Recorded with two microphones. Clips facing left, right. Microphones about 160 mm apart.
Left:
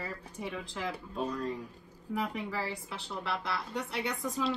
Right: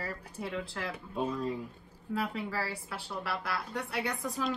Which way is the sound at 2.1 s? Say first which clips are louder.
Even; 15° left (ahead or behind).